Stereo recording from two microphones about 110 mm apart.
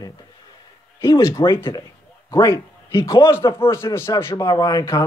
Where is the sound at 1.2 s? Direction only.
40° left (ahead or behind).